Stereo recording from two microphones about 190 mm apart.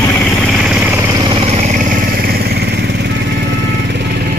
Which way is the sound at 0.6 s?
5° right (ahead or behind).